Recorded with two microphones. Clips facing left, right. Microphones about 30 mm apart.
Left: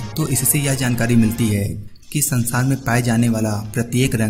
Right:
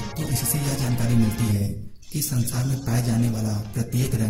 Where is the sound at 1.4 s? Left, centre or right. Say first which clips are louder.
Left 6 dB; left.